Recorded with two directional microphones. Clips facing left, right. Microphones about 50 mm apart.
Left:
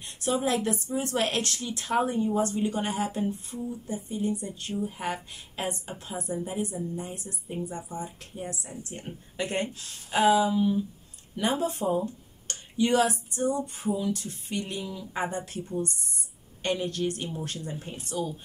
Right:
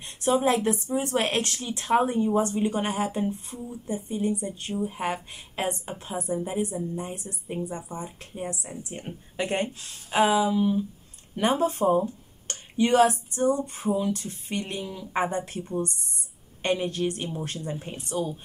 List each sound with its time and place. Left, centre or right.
0.0 s a woman's voice: right
11.3 s speech: right
16.6 s speech: right